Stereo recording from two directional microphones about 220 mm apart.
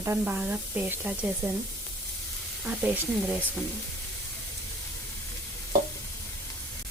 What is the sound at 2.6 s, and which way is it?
Speech, 5° right (ahead or behind).